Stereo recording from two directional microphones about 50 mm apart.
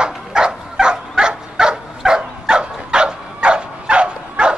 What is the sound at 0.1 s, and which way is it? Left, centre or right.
Dog, centre.